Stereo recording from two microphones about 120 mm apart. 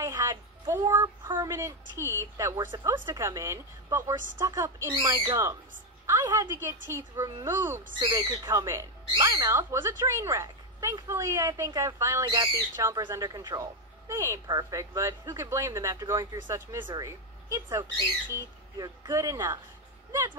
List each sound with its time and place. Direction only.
0.0 s a woman's voice: 25° right (ahead or behind)
8.0 s speech: 40° right (ahead or behind)
8.5 s speech: 25° right (ahead or behind)